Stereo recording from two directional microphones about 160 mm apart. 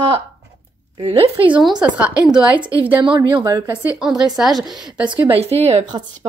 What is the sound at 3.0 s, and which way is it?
Speech, 30° right (ahead or behind).